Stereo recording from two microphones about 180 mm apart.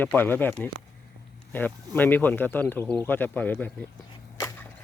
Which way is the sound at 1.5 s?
10° left (ahead or behind).